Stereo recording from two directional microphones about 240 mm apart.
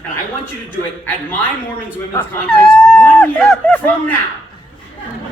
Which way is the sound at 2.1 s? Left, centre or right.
Centre.